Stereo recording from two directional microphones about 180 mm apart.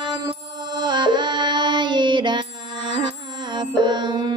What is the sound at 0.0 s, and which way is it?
Music, 25° right (ahead or behind).